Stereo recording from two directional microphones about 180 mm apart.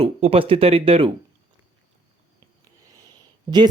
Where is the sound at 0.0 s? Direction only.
35° right (ahead or behind).